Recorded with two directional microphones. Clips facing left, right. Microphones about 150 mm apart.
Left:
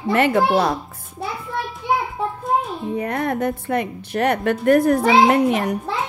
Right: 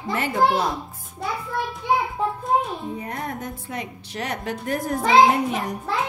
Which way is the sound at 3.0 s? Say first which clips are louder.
Left 9 dB; 70° left (ahead or behind).